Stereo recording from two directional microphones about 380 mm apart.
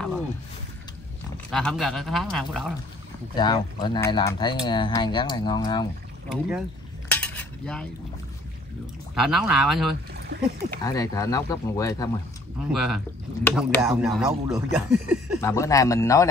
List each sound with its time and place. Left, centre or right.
1.5 s speech: centre
3.3 s speech: centre
6.2 s speech: centre
7.1 s cutlery: centre
9.1 s speech: centre
10.1 s a sound: right
10.8 s speech: centre
12.7 s speech: centre
15.4 s speech: centre